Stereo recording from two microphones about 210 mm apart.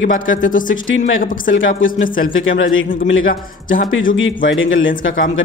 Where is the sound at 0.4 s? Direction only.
40° left (ahead or behind).